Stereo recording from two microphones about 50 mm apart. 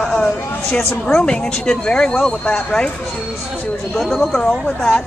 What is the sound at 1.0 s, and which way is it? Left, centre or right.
Speech, centre.